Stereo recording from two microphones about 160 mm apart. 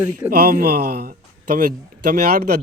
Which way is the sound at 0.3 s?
65° right (ahead or behind).